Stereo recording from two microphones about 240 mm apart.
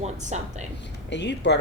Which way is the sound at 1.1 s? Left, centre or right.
Left.